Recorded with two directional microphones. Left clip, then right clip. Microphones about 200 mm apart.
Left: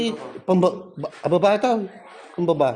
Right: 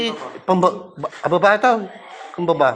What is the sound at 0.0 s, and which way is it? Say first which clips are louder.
A man's voice: right 3 dB; 35° left (ahead or behind).